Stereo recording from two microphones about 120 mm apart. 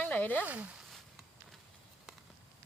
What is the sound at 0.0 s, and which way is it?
Speech, 15° left (ahead or behind).